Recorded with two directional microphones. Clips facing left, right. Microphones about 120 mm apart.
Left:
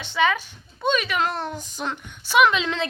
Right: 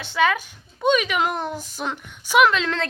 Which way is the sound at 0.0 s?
5° right (ahead or behind).